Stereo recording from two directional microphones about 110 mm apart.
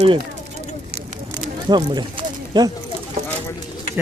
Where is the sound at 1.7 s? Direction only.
40° right (ahead or behind).